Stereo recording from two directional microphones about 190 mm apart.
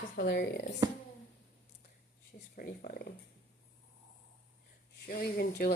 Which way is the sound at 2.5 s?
50° left (ahead or behind).